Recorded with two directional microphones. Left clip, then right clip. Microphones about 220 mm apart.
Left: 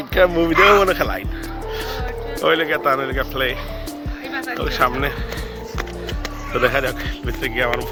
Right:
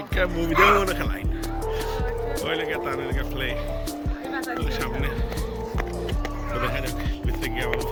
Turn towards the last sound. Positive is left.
turn(degrees=-10)  # may be behind; listen again after turning